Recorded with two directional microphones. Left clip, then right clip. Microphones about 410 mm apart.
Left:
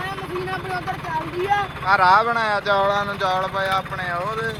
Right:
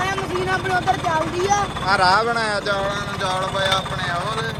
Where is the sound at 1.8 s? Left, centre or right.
Centre.